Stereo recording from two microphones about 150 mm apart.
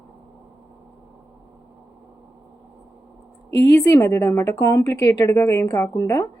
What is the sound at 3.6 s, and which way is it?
A woman's voice, 20° left (ahead or behind).